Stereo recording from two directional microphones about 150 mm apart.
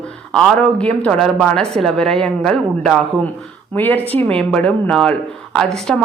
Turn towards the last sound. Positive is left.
turn(degrees=0)  # may be behind; listen again after turning